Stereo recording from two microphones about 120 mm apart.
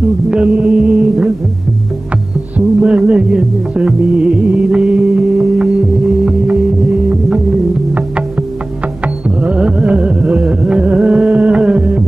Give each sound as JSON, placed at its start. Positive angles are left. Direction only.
{"t": 0.3, "sound": "music", "side_deg": -10}
{"t": 2.5, "sound": "music", "side_deg": -10}
{"t": 9.4, "sound": "carnatic music", "side_deg": -10}